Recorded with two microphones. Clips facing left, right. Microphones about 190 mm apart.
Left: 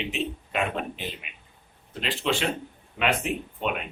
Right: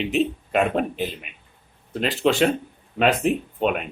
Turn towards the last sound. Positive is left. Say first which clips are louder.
# right 8 dB
turn(degrees=-40)  # may be behind; listen again after turning